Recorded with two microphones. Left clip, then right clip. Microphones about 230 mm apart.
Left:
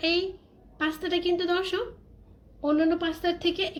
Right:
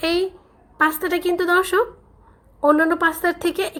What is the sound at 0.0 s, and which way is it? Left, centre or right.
A woman's voice, right.